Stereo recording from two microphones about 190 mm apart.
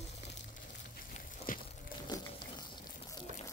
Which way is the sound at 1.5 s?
45° left (ahead or behind).